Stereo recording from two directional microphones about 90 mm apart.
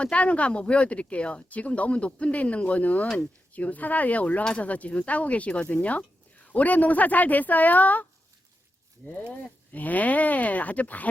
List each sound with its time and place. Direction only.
0.0 s speech: 15° left (ahead or behind)
9.3 s speech: 20° left (ahead or behind)